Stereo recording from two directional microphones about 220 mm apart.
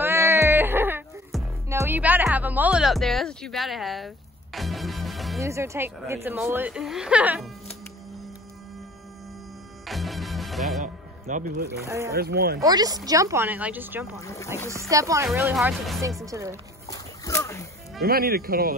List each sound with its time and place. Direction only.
0.0 s music: 10° right (ahead or behind)
5.4 s speech: 15° right (ahead or behind)
9.8 s music: centre (ahead or behind)
10.8 s music: 35° right (ahead or behind)
11.8 s speech: 15° right (ahead or behind)
12.1 s speech: 45° right (ahead or behind)
12.5 s speech: 15° right (ahead or behind)
14.2 s speech: 15° left (ahead or behind)
14.7 s speech: 15° right (ahead or behind)
15.5 s speech: centre (ahead or behind)
16.3 s speech: 15° right (ahead or behind)
16.8 s a sound: 15° left (ahead or behind)
18.0 s speech: 45° right (ahead or behind)